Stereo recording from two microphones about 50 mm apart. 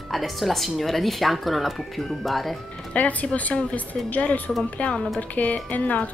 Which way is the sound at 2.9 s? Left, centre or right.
Left.